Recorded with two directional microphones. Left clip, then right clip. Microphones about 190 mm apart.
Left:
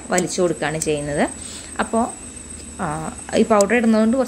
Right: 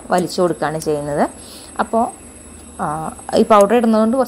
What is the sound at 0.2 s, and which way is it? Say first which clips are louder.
Speech: right 3 dB; 15° right (ahead or behind).